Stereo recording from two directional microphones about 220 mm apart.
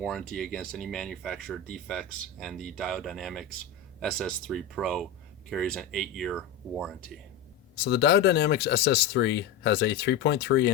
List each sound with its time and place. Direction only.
0.0 s speech: centre (ahead or behind)
7.9 s speech: 50° left (ahead or behind)